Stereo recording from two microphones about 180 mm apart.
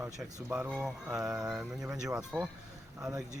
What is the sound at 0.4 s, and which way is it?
Speech, 10° right (ahead or behind).